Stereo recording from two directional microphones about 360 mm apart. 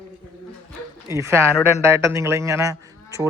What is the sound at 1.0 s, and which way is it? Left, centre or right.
A man's voice, centre.